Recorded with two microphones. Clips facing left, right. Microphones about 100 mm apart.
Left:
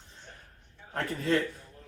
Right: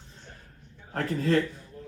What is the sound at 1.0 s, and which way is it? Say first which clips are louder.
Speech: right 3 dB; 35° right (ahead or behind).